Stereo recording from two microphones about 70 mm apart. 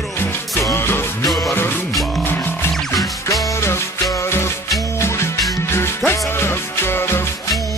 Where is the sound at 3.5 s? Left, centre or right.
Left.